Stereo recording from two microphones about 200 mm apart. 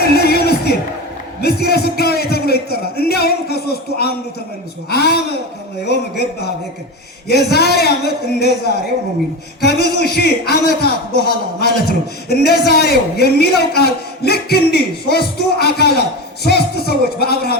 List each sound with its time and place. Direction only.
0.0 s a sound: 50° left (ahead or behind)
1.4 s speech: 50° left (ahead or behind)
9.6 s speech: 55° left (ahead or behind)